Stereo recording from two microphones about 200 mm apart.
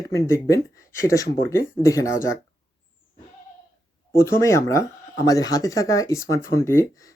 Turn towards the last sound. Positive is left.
turn(degrees=15)  # may be behind; listen again after turning